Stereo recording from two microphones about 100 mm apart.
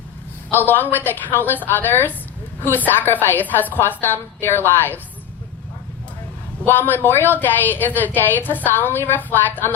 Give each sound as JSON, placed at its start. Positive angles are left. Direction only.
{"t": 0.5, "sound": "a woman's voice", "side_deg": 20}
{"t": 6.7, "sound": "a woman's voice", "side_deg": 20}